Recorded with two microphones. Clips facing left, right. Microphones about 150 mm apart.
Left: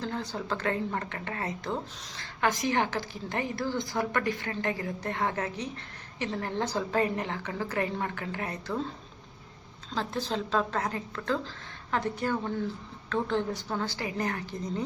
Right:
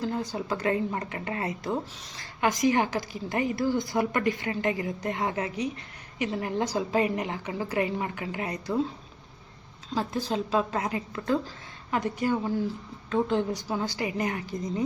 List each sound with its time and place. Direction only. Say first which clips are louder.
0.0 s a woman's voice: right 4 dB; 10° right (ahead or behind)
9.9 s a woman's voice: right 3 dB; 10° right (ahead or behind)
13.1 s a woman's voice: right 3 dB; 15° right (ahead or behind)